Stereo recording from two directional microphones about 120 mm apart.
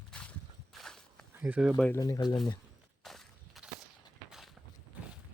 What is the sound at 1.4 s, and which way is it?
Speech, 10° right (ahead or behind).